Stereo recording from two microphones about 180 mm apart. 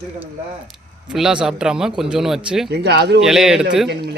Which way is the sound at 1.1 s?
5° right (ahead or behind).